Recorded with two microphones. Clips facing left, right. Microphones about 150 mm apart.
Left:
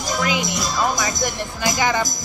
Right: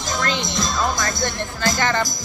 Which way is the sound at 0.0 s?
10° left (ahead or behind).